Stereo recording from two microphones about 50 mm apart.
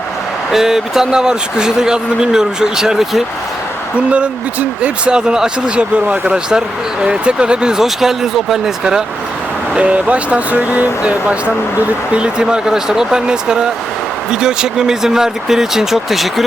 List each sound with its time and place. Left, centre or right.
0.5 s speech: centre
3.9 s speech: right
9.7 s speech: right; by 16.3 s centre